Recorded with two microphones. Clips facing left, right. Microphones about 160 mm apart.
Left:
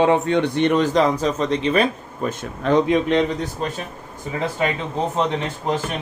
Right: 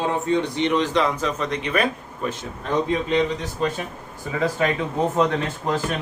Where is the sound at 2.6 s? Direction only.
85° left.